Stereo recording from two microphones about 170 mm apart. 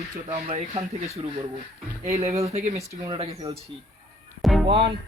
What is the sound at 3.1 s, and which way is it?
Speech, 30° right (ahead or behind).